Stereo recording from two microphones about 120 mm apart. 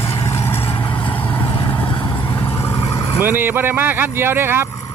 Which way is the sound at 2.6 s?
25° left (ahead or behind).